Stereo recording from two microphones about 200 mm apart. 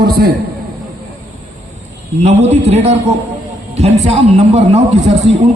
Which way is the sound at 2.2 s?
35° right (ahead or behind).